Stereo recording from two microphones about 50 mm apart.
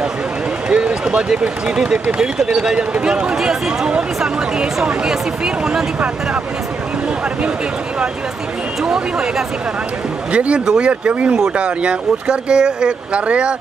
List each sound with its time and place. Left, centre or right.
0.7 s run: centre
1.4 s speech: centre
8.8 s speech: centre
10.3 s speech: right
10.6 s speech: centre
10.9 s speech: right